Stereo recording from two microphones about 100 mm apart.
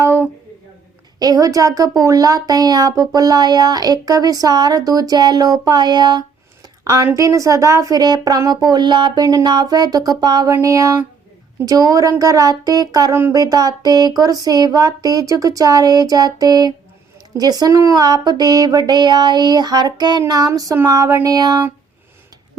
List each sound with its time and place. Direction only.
0.0 s a sound: 25° right (ahead or behind)
1.2 s speech: 40° right (ahead or behind)
6.8 s speech: 30° right (ahead or behind)
10.5 s speech: 30° right (ahead or behind)
20.7 s a sound: 30° right (ahead or behind)
21.2 s speech: 40° right (ahead or behind)